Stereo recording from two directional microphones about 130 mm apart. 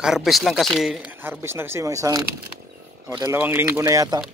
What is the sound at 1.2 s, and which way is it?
Speech, 20° right (ahead or behind).